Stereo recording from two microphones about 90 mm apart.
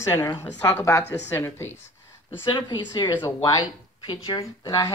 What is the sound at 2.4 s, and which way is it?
Speech, 55° left (ahead or behind).